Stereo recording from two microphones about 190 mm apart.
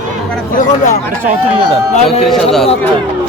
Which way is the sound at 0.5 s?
40° left (ahead or behind).